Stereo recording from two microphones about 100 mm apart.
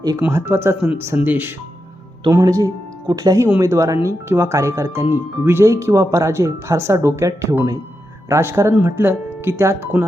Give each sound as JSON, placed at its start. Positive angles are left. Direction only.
{"t": 0.2, "sound": "speech", "side_deg": -25}
{"t": 2.3, "sound": "speech", "side_deg": -35}